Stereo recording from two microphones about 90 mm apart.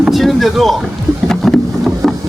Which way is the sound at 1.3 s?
5° left (ahead or behind).